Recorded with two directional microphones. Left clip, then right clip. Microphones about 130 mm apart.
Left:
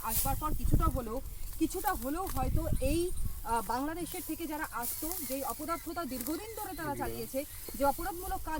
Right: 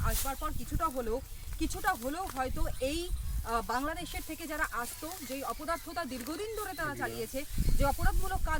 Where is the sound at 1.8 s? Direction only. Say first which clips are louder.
Right 1 dB; 25° right (ahead or behind).